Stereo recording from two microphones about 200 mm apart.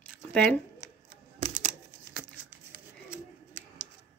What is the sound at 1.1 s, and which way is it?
Typing, 30° right (ahead or behind).